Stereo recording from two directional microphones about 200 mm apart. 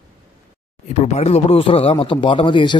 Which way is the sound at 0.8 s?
30° left (ahead or behind).